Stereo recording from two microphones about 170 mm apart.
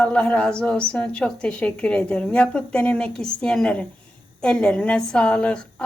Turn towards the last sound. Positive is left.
turn(degrees=5)  # may be behind; listen again after turning